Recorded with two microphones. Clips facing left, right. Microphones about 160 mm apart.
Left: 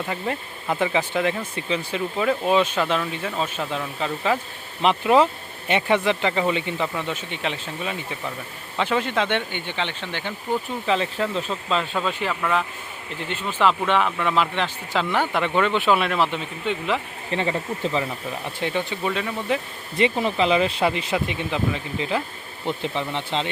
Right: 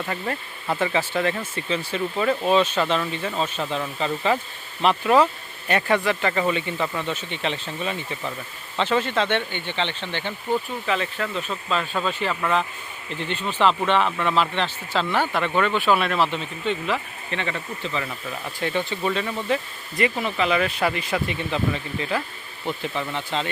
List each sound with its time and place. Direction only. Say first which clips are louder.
0.0 s speech: left 1 dB; 10° left (ahead or behind)
10.8 s speech: left 3 dB; 25° left (ahead or behind)
12.3 s speech: even; centre (ahead or behind)
17.3 s speech: left 4 dB; 30° left (ahead or behind)
18.0 s speech: left 2 dB; 15° left (ahead or behind)
20.0 s speech: left 2 dB; 30° left (ahead or behind)